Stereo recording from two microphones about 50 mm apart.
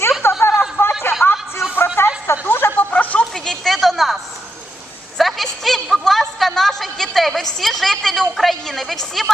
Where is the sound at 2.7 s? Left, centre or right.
Left.